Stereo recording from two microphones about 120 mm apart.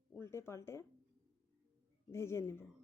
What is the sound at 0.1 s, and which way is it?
Speech, 20° left (ahead or behind).